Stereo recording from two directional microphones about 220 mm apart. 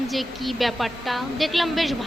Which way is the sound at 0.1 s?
Centre (ahead or behind).